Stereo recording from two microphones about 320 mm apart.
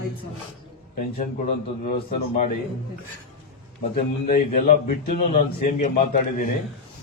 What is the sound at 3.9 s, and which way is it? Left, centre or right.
A man's voice, left.